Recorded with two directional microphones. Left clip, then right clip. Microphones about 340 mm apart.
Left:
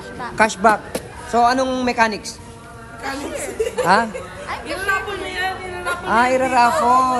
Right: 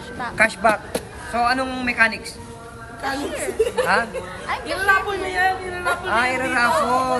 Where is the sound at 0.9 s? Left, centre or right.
Centre.